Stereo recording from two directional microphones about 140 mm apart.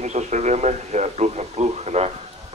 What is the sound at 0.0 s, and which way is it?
Radio, 55° right (ahead or behind).